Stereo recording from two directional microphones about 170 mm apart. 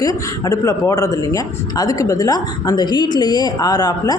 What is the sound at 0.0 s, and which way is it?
A woman's voice, 20° left (ahead or behind).